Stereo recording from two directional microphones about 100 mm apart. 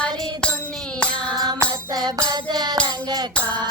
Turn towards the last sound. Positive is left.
turn(degrees=-45)  # may be behind; listen again after turning